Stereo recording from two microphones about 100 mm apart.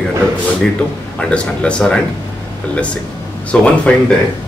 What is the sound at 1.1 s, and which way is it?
A man's voice, 10° left (ahead or behind).